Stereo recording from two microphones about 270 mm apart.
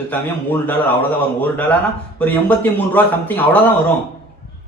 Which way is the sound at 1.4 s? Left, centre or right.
Centre.